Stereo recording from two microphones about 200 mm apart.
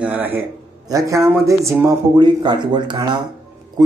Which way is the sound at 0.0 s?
10° right (ahead or behind).